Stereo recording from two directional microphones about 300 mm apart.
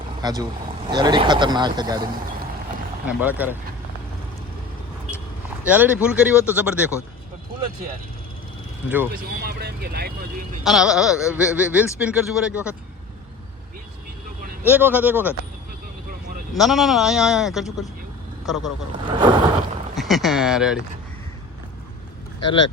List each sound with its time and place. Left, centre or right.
0.2 s speech: centre
3.1 s speech: centre
5.6 s speech: centre
9.3 s speech: right
10.6 s speech: centre
14.6 s speech: centre
16.6 s speech: centre
19.0 s speech: centre
20.0 s speech: centre